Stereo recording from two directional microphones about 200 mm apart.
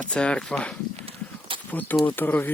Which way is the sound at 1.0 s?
30° right (ahead or behind).